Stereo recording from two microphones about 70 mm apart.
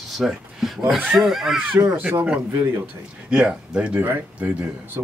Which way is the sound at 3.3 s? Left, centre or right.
Centre.